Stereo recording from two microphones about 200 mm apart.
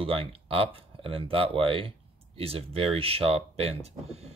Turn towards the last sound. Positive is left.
turn(degrees=-30)  # may be behind; listen again after turning